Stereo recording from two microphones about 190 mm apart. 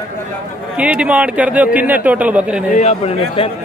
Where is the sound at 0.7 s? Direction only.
5° right (ahead or behind).